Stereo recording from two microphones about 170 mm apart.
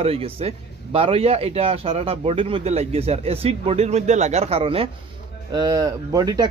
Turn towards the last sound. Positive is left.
turn(degrees=-20)  # may be behind; listen again after turning